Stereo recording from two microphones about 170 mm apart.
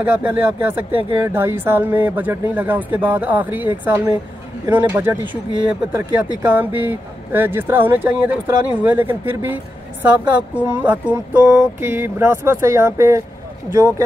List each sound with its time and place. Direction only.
0.0 s speech: 10° right (ahead or behind)
6.4 s speech: 10° right (ahead or behind)